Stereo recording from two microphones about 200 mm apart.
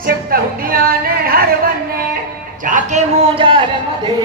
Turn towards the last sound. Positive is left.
turn(degrees=-25)  # may be behind; listen again after turning